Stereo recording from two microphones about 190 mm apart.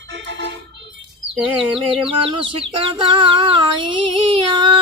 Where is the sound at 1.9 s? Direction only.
25° right (ahead or behind).